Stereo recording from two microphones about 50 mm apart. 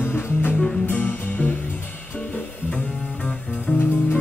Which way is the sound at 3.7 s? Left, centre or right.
Left.